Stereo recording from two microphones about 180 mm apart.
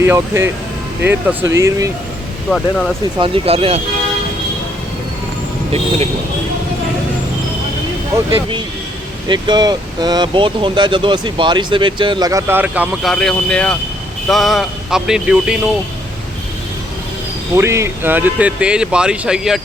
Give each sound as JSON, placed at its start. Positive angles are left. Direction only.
{"t": 0.0, "sound": "speech", "side_deg": -15}
{"t": 2.5, "sound": "speech", "side_deg": 0}
{"t": 3.2, "sound": "speech", "side_deg": -30}
{"t": 8.3, "sound": "speech", "side_deg": -30}
{"t": 17.5, "sound": "speech", "side_deg": -15}